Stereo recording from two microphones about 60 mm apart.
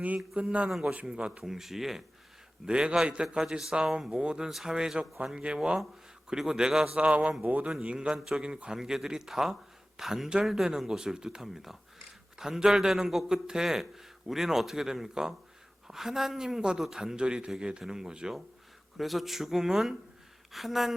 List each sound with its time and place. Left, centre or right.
0.4 s a man's voice: right
7.7 s a man's voice: centre